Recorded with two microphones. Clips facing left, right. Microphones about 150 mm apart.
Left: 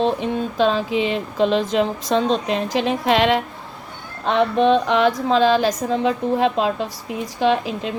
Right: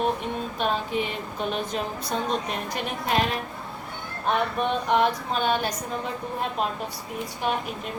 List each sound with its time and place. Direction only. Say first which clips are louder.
0.0 s speech: left 6 dB; 90° left